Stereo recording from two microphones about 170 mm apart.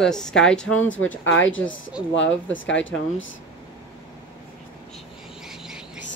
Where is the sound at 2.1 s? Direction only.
90° left.